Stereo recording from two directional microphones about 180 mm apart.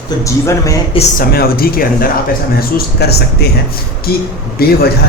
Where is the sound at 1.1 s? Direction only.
55° left (ahead or behind).